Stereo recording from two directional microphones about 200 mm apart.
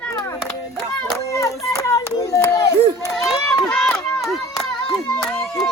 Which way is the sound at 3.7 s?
5° left (ahead or behind).